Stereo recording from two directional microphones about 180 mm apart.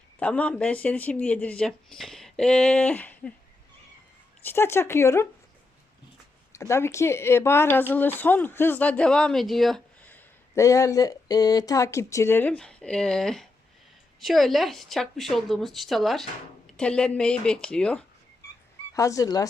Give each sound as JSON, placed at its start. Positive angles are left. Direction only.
{"t": 0.2, "sound": "speech", "side_deg": 5}
{"t": 4.4, "sound": "speech", "side_deg": 15}
{"t": 6.5, "sound": "speech", "side_deg": 15}
{"t": 18.9, "sound": "speech", "side_deg": 20}